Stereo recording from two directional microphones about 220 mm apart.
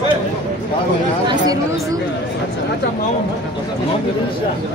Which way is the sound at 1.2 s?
15° right (ahead or behind).